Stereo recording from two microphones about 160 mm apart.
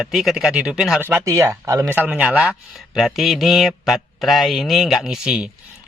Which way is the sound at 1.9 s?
10° right (ahead or behind).